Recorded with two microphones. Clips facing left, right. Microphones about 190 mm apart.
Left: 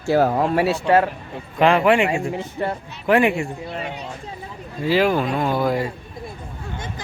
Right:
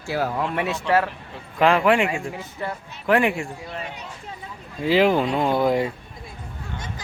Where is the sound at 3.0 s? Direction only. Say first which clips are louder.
Left 3 dB; 5° left (ahead or behind).